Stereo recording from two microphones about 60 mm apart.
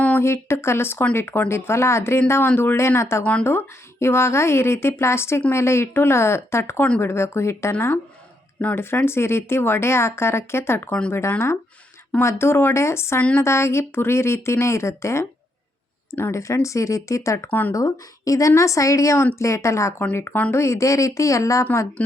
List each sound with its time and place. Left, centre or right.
0.2 s speech: left
13.1 s a woman's voice: left
13.4 s speech: left
16.3 s a woman's voice: left
17.7 s a woman's voice: left